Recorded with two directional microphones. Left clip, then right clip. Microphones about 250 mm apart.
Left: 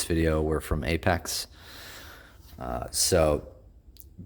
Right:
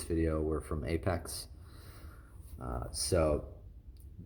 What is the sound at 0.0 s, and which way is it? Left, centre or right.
Speech, left.